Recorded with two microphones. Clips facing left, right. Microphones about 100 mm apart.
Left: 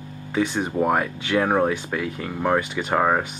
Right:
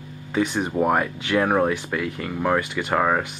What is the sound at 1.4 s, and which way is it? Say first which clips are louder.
Speech: even; 5° left (ahead or behind).